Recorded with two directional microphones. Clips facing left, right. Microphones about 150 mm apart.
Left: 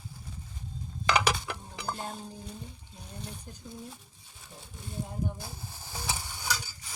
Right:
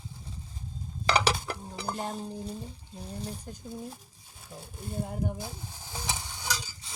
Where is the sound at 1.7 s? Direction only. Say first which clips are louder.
Right 3 dB; 35° right (ahead or behind).